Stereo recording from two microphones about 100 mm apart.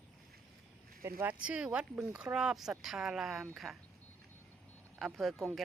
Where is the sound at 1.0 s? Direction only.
30° right (ahead or behind).